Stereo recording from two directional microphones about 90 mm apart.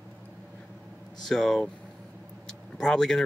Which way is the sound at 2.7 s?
5° left (ahead or behind).